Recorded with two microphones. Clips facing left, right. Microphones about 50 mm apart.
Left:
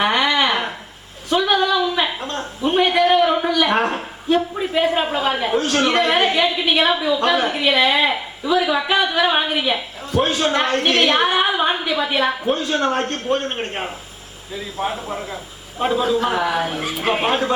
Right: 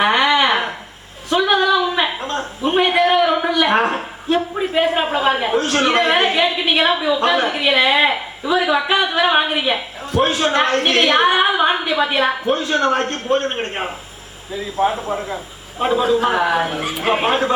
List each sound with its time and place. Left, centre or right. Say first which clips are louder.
0.0 s a sound: right 3 dB; centre
3.5 s a woman's voice: right 2 dB; centre
11.4 s a woman's voice: right 3 dB; right
12.5 s a woman's voice: right 2 dB; centre